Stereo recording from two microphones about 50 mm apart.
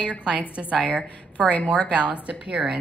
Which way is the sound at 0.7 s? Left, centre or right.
Left.